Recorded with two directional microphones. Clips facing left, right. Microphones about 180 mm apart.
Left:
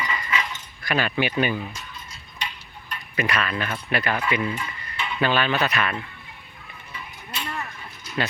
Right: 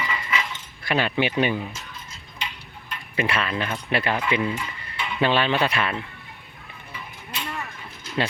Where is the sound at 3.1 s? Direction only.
25° right (ahead or behind).